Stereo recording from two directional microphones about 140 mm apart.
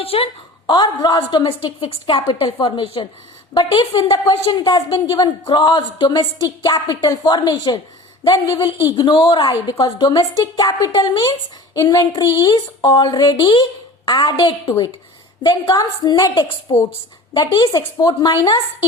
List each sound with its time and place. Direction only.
0.0 s a woman's voice: 45° left (ahead or behind)
0.7 s a woman's voice: 30° left (ahead or behind)
1.5 s a woman's voice: 40° left (ahead or behind)